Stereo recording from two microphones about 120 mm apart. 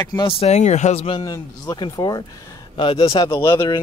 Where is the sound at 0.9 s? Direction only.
50° left (ahead or behind).